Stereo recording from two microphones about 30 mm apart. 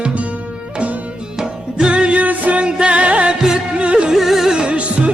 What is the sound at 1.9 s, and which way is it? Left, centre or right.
Music, right.